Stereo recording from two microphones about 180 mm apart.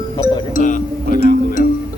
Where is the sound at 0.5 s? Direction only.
45° left (ahead or behind).